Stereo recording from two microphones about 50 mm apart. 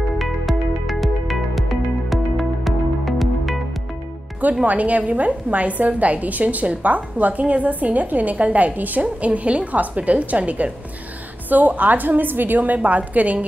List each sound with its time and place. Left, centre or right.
0.2 s music: centre
4.6 s a woman's voice: right